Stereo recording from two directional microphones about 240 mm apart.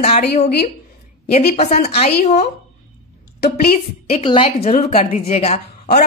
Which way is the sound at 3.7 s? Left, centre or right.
Left.